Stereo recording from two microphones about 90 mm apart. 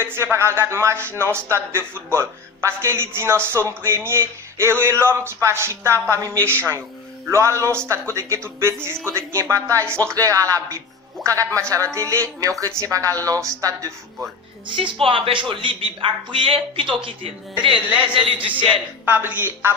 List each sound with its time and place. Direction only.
0.0 s a man's voice: 30° right (ahead or behind)
14.7 s a man's voice: 65° right (ahead or behind)
19.0 s a man's voice: 20° right (ahead or behind)